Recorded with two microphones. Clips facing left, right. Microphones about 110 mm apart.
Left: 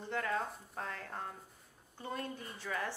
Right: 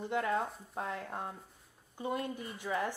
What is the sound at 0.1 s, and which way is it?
Speech, 20° right (ahead or behind).